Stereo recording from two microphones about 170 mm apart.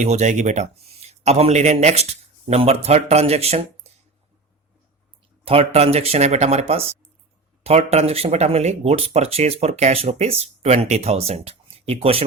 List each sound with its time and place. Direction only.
0.0 s a man's voice: 45° right (ahead or behind)
5.5 s speech: 35° right (ahead or behind)